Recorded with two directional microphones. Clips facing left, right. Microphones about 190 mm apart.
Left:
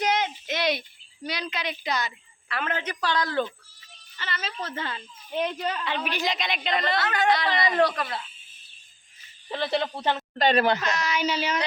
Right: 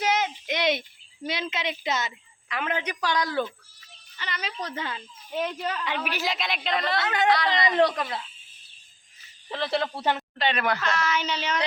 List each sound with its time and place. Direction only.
0.0 s a sound: 5° right (ahead or behind)
1.3 s a woman's voice: 20° right (ahead or behind); by 7.0 s centre (ahead or behind)
7.0 s speech: 20° right (ahead or behind)
7.3 s a woman's voice: centre (ahead or behind)
9.5 s a woman's voice: centre (ahead or behind)
10.3 s speech: 40° left (ahead or behind)
10.8 s speech: 15° left (ahead or behind)